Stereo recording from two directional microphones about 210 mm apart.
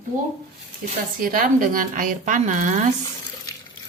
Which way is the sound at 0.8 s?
40° right (ahead or behind).